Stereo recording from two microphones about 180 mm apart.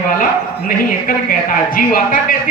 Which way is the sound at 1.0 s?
50° left (ahead or behind).